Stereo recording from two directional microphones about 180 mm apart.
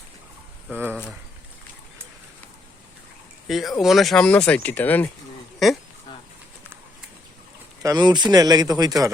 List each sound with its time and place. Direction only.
0.7 s speech: 10° right (ahead or behind)
3.4 s speech: centre (ahead or behind)
7.8 s speech: 20° right (ahead or behind)